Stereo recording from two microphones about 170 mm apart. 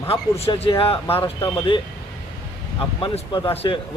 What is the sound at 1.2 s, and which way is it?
Speech, 20° left (ahead or behind).